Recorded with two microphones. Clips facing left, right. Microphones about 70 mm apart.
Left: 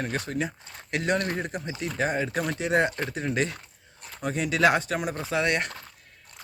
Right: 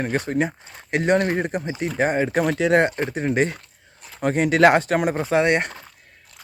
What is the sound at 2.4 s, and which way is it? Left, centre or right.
Speech, right.